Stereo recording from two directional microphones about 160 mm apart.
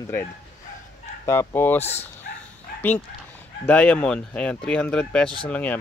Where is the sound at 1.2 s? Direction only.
15° left (ahead or behind).